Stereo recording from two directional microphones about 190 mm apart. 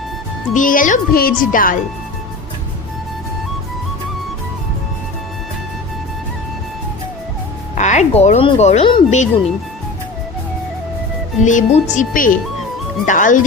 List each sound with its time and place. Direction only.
0.5 s speech: 45° left (ahead or behind)
7.8 s speech: 40° left (ahead or behind)
11.4 s speech: 40° left (ahead or behind)